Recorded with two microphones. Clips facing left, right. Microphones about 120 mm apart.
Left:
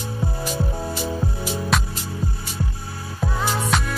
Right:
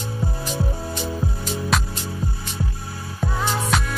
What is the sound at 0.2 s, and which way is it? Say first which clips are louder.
Music: left 1 dB; centre (ahead or behind).